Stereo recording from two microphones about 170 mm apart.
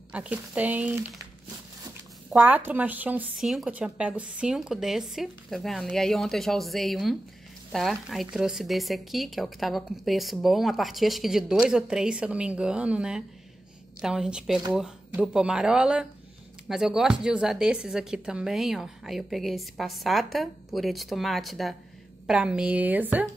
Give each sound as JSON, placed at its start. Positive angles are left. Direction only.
{"t": 0.1, "sound": "speech", "side_deg": -10}
{"t": 2.3, "sound": "speech", "side_deg": -10}